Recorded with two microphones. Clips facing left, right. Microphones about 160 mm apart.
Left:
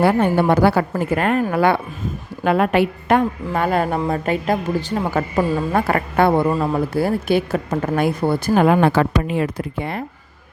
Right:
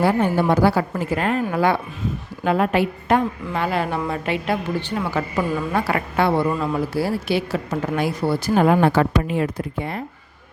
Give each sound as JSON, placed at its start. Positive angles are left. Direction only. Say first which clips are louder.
{"t": 0.0, "sound": "a woman's voice", "louder": "left 3 dB", "side_deg": 60}
{"t": 8.8, "sound": "speech", "louder": "left 1 dB", "side_deg": 90}